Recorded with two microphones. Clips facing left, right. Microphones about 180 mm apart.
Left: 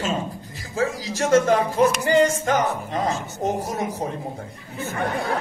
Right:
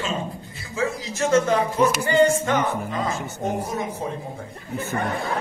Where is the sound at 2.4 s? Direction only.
40° left (ahead or behind).